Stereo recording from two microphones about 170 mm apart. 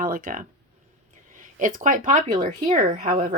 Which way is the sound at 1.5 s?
50° right (ahead or behind).